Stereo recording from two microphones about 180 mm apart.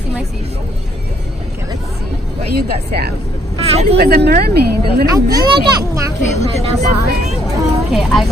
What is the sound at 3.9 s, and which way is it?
Speech, 65° right (ahead or behind).